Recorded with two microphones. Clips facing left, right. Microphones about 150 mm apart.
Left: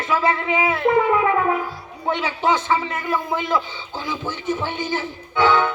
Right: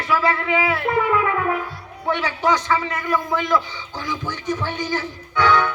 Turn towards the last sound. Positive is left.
turn(degrees=15)  # may be behind; listen again after turning